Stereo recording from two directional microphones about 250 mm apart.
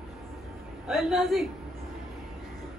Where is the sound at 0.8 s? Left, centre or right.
Centre.